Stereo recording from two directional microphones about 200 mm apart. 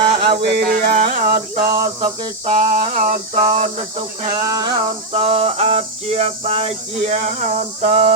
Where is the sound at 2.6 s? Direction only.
40° right (ahead or behind).